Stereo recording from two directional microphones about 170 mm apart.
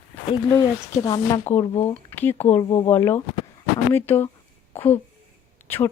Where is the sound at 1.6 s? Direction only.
35° left (ahead or behind).